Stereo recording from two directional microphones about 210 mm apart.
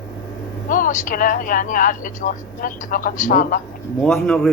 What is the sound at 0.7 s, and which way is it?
A woman's voice, 40° left (ahead or behind).